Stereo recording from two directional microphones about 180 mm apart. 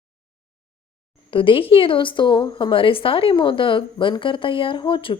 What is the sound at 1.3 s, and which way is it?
A woman's voice, 30° left (ahead or behind).